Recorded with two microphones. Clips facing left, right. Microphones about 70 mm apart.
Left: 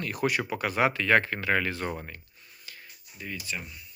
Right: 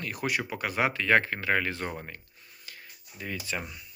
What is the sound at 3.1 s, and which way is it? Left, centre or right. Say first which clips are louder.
Speech: right 2 dB; right.